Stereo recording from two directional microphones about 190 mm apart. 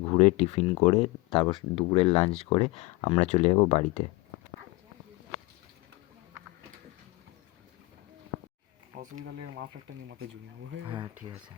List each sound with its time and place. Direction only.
0.1 s speech: 35° left (ahead or behind)
9.1 s speech: 70° right (ahead or behind)
10.8 s speech: 25° right (ahead or behind)